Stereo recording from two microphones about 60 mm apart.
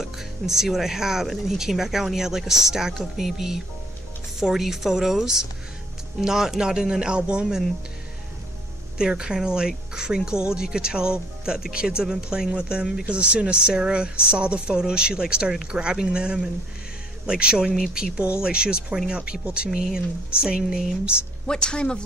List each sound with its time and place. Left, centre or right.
0.0 s speech: centre
8.9 s speech: centre
21.5 s speech: centre